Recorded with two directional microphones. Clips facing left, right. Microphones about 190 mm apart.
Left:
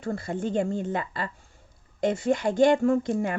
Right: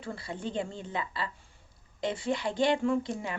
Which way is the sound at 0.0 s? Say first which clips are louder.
Left 7 dB; 45° left (ahead or behind).